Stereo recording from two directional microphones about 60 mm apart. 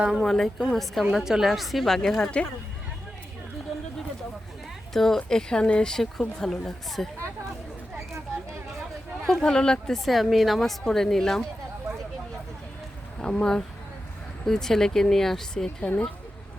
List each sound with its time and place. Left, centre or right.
0.2 s speech: centre
4.9 s a woman's voice: centre
9.2 s speech: centre
13.1 s a woman's voice: centre